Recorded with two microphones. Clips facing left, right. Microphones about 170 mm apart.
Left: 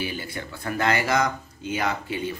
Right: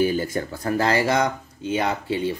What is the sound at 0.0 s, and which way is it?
Speech, 45° right (ahead or behind).